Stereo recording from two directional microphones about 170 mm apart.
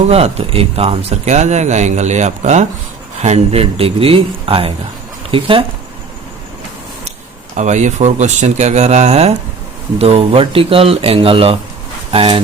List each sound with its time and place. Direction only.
0.0 s speech: 35° right (ahead or behind)
7.5 s speech: 45° right (ahead or behind)